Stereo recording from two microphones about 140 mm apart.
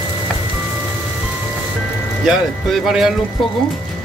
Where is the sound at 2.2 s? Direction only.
5° right (ahead or behind).